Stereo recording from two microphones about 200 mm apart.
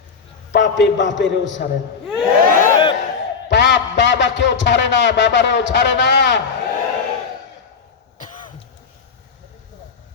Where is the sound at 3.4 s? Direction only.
60° left (ahead or behind).